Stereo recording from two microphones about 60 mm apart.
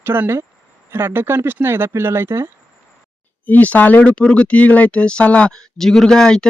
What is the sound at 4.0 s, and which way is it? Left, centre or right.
Speech, centre.